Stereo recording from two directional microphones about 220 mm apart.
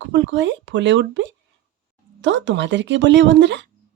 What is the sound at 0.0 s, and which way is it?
Speech, 55° right (ahead or behind).